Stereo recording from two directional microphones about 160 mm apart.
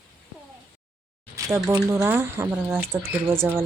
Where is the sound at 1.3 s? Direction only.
20° right (ahead or behind).